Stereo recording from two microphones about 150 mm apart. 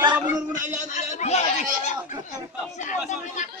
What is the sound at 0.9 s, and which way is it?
Snicker, 50° left (ahead or behind).